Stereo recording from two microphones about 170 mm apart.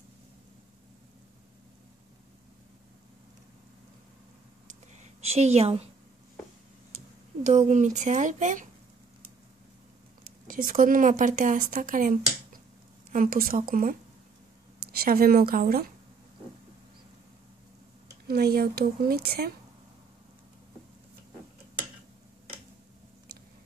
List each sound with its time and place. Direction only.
5.2 s a woman's voice: 40° right (ahead or behind)
7.4 s speech: 45° right (ahead or behind)
10.2 s a woman's voice: 55° right (ahead or behind)
18.2 s a woman's voice: 65° right (ahead or behind)